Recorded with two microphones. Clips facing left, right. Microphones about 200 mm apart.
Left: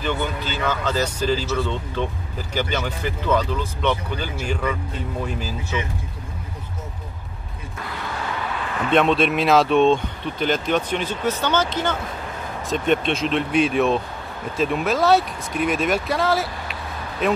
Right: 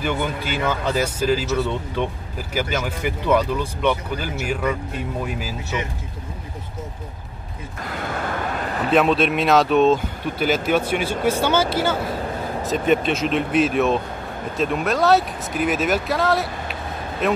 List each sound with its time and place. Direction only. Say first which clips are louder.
0.0 s speech: right 1 dB; 10° right (ahead or behind)
7.9 s a sound: right 3 dB; 50° right (ahead or behind)
8.9 s speech: even; centre (ahead or behind)